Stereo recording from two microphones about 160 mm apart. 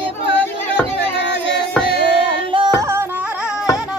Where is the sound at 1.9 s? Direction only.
35° right (ahead or behind).